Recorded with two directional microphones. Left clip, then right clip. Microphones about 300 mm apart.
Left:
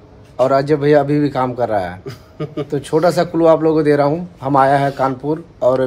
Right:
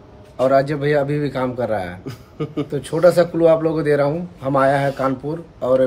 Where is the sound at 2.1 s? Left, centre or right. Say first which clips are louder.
Left 1 dB; centre.